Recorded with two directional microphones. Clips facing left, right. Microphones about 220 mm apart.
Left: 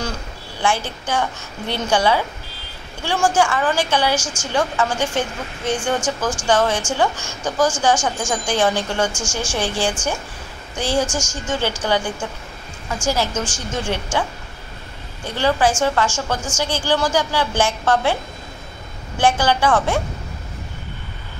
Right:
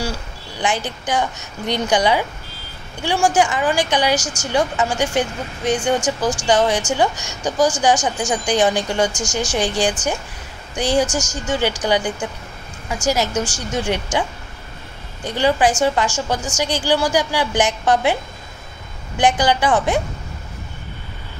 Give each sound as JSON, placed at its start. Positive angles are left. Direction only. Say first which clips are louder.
{"t": 0.6, "sound": "a woman's voice", "louder": "even", "side_deg": -15}
{"t": 4.2, "sound": "a woman's voice", "louder": "right 1 dB", "side_deg": -40}
{"t": 4.5, "sound": "a woman's voice", "louder": "right 1 dB", "side_deg": -15}
{"t": 15.2, "sound": "a woman's voice", "louder": "right 1 dB", "side_deg": -15}
{"t": 19.1, "sound": "a woman's voice", "louder": "right 1 dB", "side_deg": -15}